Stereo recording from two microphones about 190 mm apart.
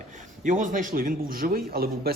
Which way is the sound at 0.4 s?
40° right (ahead or behind).